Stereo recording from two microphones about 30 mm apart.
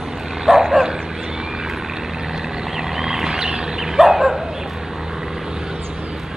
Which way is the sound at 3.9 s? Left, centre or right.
Centre.